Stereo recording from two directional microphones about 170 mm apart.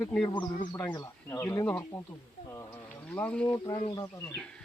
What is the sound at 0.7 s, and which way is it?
Speech, 25° left (ahead or behind).